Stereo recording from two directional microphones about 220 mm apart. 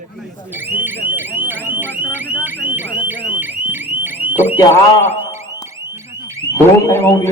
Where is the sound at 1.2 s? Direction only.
10° right (ahead or behind).